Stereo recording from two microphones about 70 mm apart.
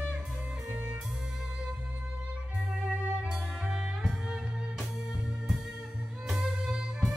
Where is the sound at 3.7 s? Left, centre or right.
Centre.